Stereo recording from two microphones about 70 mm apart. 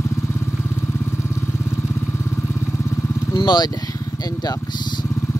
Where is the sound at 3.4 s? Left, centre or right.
Left.